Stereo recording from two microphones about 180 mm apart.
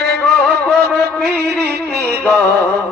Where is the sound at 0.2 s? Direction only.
5° left (ahead or behind).